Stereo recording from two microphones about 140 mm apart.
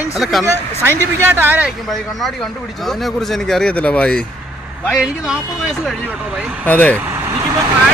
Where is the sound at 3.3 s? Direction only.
5° left (ahead or behind).